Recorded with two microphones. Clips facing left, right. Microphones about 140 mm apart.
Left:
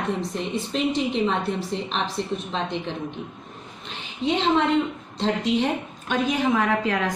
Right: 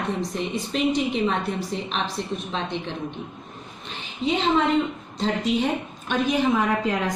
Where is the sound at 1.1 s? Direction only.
5° right (ahead or behind).